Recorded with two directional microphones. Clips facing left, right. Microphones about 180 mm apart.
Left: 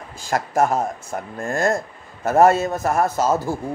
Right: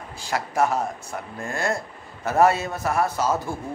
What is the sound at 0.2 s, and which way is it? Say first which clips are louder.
Speech: left 3 dB; 45° left (ahead or behind).